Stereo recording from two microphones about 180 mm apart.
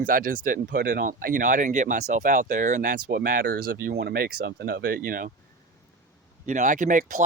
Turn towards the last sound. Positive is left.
turn(degrees=-45)  # may be behind; listen again after turning